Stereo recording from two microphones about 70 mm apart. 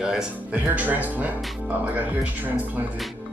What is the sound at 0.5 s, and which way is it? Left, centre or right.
Speech, right.